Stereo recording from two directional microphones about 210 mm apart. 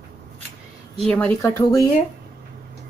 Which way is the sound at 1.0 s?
5° left (ahead or behind).